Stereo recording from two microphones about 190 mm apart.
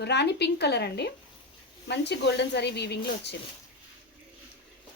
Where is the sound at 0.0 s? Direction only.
60° left (ahead or behind).